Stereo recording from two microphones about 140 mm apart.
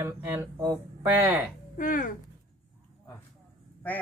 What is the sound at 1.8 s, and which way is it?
Speech, 75° left (ahead or behind).